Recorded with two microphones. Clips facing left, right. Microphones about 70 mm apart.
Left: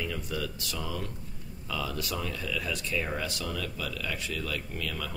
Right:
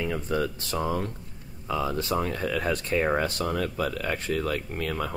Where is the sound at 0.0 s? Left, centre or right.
Right.